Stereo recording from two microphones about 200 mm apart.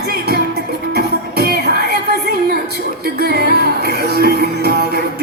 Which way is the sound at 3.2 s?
50° right (ahead or behind).